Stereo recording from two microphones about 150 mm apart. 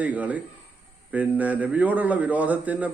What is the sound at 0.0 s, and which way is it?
A man's voice, 10° right (ahead or behind).